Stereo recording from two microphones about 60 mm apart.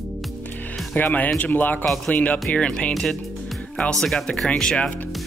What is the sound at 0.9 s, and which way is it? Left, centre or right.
Speech, left.